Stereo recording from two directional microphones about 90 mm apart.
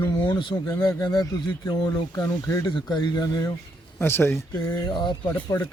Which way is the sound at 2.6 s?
60° left (ahead or behind).